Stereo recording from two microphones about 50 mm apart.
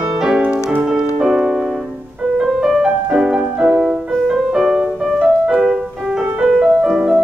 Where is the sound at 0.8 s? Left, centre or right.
Centre.